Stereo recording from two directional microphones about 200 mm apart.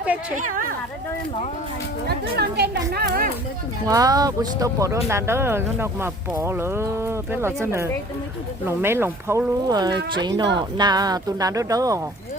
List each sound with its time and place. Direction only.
0.0 s a sound: 5° right (ahead or behind)
0.3 s speech: 40° right (ahead or behind)
2.0 s speech: 55° right (ahead or behind)
3.8 s speech: 20° right (ahead or behind)